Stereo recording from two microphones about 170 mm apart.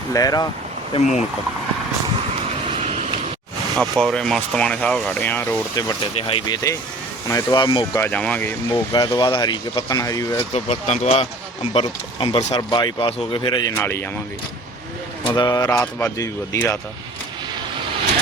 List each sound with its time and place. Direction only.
0.1 s speech: 20° left (ahead or behind)
0.9 s speech: 45° left (ahead or behind)
2.7 s a sound: 40° right (ahead or behind)
3.8 s speech: 5° left (ahead or behind)
6.1 s speech: 30° left (ahead or behind)
7.9 s speech: 10° left (ahead or behind)
8.7 s speech: 25° left (ahead or behind)
10.5 s speech: 40° left (ahead or behind)
13.7 s speech: 15° left (ahead or behind)
15.4 s speech: 20° left (ahead or behind)
15.8 s speech: 10° left (ahead or behind)
16.1 s speech: 20° left (ahead or behind)